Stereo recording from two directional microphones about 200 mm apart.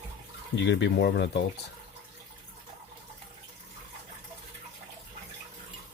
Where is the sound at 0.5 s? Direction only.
65° left (ahead or behind).